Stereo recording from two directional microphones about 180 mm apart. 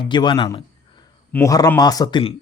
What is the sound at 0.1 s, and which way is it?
Speech, 25° left (ahead or behind).